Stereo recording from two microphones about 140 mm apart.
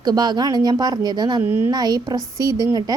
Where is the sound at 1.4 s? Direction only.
15° right (ahead or behind).